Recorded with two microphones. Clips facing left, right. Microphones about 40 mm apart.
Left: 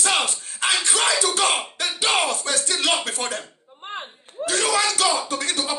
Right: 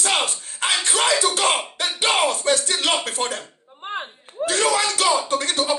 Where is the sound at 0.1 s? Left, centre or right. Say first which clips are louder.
Right 1 dB; right.